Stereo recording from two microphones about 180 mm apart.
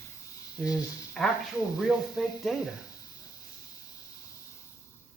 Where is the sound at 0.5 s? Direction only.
20° left (ahead or behind).